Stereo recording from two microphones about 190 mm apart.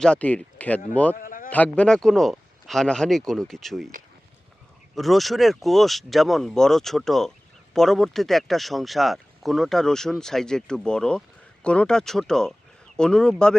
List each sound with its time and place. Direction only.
0.0 s speech: 5° left (ahead or behind)
1.1 s a sound: 45° left (ahead or behind)
1.5 s speech: 10° left (ahead or behind)
4.9 s speech: centre (ahead or behind)